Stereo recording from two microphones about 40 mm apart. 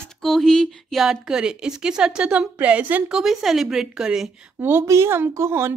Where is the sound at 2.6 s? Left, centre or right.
Right.